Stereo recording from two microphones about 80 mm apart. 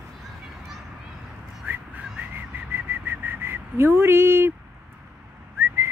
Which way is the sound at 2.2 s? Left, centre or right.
Right.